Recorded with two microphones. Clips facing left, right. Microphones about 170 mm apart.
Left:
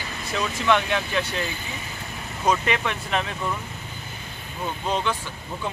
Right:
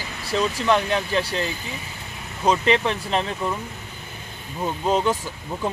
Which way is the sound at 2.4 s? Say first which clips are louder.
Right 4 dB; 30° right (ahead or behind).